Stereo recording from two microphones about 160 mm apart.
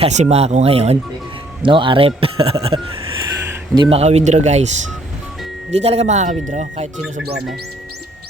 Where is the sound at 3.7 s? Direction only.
35° right (ahead or behind).